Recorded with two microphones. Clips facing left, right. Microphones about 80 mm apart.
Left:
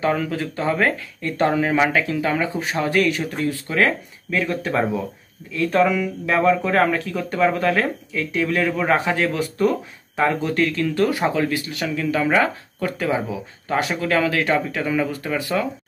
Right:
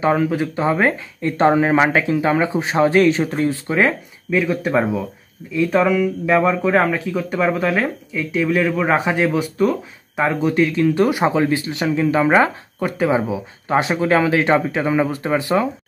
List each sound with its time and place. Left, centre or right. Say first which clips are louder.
0.0 s speech: right 4 dB; right